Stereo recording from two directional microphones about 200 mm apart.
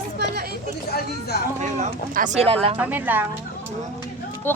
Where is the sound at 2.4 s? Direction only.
30° right (ahead or behind).